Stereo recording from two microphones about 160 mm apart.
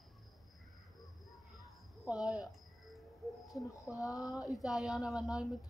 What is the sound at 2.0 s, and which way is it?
Music, 5° right (ahead or behind).